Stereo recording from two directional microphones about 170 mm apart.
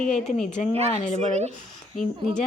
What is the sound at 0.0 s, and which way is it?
Speech, centre (ahead or behind).